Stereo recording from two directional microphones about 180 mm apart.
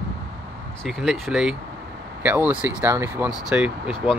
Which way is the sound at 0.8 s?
Centre (ahead or behind).